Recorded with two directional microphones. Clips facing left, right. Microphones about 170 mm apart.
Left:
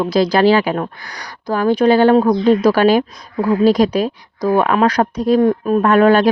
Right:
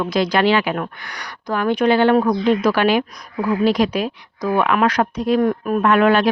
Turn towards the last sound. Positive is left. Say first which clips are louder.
# left 3 dB
turn(degrees=40)  # may be behind; listen again after turning